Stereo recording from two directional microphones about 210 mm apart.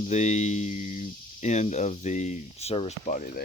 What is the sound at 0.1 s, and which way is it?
Speech, 35° left (ahead or behind).